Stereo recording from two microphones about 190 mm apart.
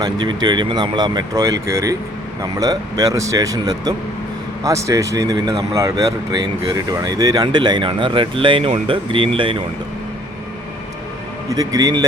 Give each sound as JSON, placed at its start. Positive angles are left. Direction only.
{"t": 0.0, "sound": "speech", "side_deg": -20}
{"t": 11.4, "sound": "speech", "side_deg": -20}